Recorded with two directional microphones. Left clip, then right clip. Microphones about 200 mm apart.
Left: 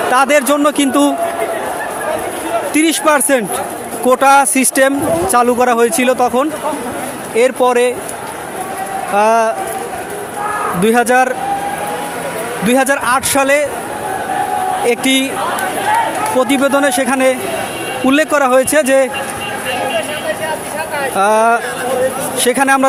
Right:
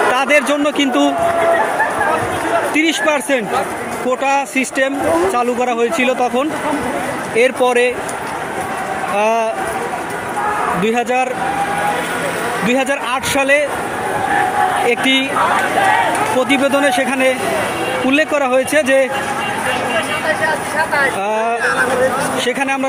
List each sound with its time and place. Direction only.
0.1 s a man's voice: 20° left (ahead or behind)
2.7 s a man's voice: 25° left (ahead or behind)
9.1 s a man's voice: 25° left (ahead or behind)
10.8 s a man's voice: 25° left (ahead or behind)
12.6 s a man's voice: 25° left (ahead or behind)
14.8 s a man's voice: 25° left (ahead or behind)
16.4 s a man's voice: 20° left (ahead or behind)
21.2 s a man's voice: 30° left (ahead or behind)